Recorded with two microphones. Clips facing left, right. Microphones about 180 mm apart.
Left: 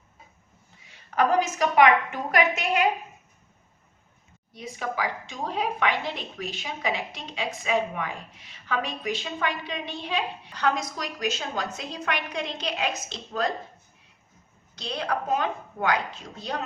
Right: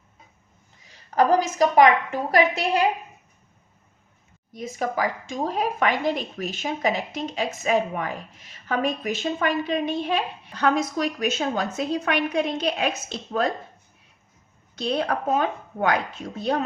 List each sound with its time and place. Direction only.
0.9 s a woman's voice: 35° right (ahead or behind)
4.5 s a woman's voice: 45° right (ahead or behind)
14.8 s a woman's voice: 55° right (ahead or behind)